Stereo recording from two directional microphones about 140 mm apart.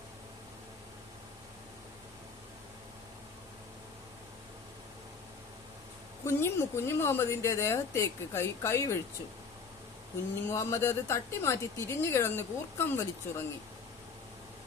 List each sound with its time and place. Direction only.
6.2 s a woman's voice: 20° left (ahead or behind)
10.5 s a woman's voice: 20° left (ahead or behind)